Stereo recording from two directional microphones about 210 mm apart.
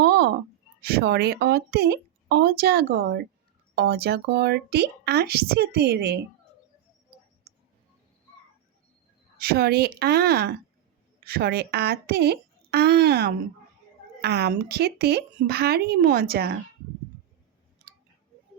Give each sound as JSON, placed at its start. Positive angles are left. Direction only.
{"t": 0.0, "sound": "a sound", "side_deg": -50}
{"t": 0.8, "sound": "a woman's voice", "side_deg": -50}
{"t": 7.5, "sound": "clicking", "side_deg": -50}
{"t": 9.4, "sound": "a woman's voice", "side_deg": -45}